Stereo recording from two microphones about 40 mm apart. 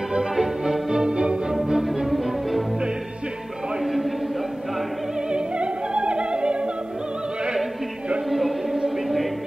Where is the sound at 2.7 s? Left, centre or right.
Centre.